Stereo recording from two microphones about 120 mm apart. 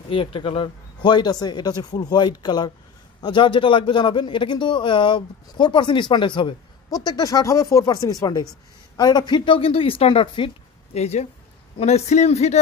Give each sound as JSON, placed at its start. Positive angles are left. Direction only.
{"t": 0.1, "sound": "a man's voice", "side_deg": 45}
{"t": 10.9, "sound": "a man's voice", "side_deg": 65}